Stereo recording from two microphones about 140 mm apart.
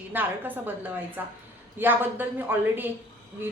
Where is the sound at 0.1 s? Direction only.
15° right (ahead or behind).